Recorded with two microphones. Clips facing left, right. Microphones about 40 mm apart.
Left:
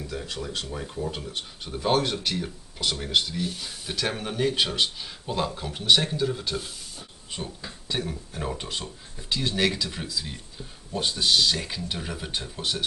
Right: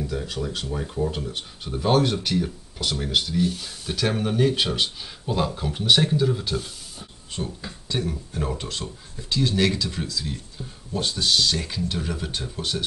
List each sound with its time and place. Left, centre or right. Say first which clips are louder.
0.0 s speech: right 5 dB; centre